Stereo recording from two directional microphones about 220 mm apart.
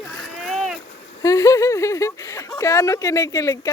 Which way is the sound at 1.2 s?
15° left (ahead or behind).